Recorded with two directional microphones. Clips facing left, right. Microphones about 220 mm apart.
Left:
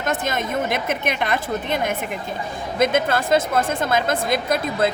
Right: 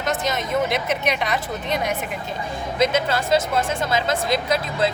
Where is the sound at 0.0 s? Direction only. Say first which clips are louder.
Left 1 dB; 50° left (ahead or behind).